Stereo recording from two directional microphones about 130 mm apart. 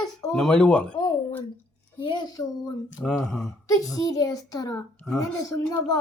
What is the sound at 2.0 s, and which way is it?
Speech, 35° left (ahead or behind).